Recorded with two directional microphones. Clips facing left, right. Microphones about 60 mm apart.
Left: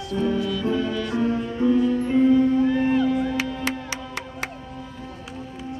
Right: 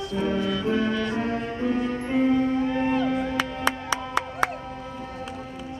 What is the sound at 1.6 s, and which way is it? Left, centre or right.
Music, right.